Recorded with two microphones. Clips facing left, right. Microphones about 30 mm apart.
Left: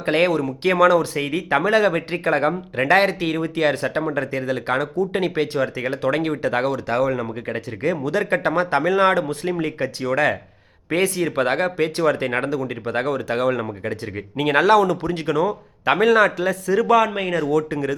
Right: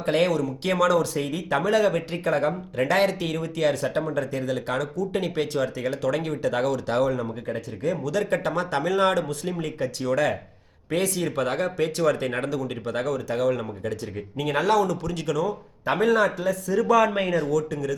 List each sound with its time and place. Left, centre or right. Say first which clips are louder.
0.0 s speech: left 3 dB; left
6.8 s speech: left 2 dB; centre
7.4 s speech: left 5 dB; left
8.1 s a man's voice: left 5 dB; left
10.0 s a man's voice: left 4 dB; centre
11.3 s speech: left 5 dB; left
13.1 s speech: left 3 dB; left
13.6 s speech: left 4 dB; left
14.3 s speech: left 6 dB; left
15.1 s speech: left 5 dB; left
15.9 s a man's voice: left 5 dB; left
16.2 s speech: left 4 dB; left
17.0 s a man's voice: left 1 dB; left
17.5 s speech: left 4 dB; left